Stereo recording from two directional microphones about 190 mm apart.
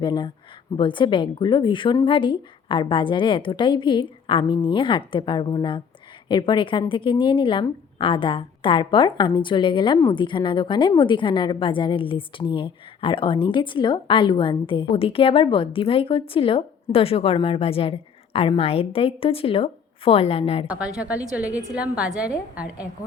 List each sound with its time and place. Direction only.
0.0 s a woman's voice: 25° left (ahead or behind)
20.7 s a woman's voice: 5° right (ahead or behind)